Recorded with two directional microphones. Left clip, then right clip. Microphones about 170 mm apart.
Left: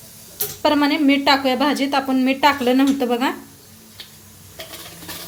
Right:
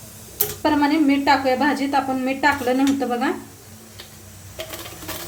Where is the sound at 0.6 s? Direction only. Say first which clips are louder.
Left 1 dB; 50° left (ahead or behind).